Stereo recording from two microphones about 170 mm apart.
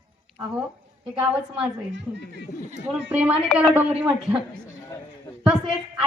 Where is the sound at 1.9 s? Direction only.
90° right.